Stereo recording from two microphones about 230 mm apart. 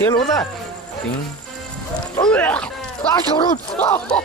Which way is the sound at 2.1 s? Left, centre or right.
Centre.